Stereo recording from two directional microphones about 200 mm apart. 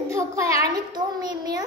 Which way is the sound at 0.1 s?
15° right (ahead or behind).